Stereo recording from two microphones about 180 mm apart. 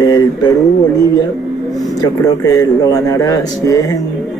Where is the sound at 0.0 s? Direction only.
20° left (ahead or behind).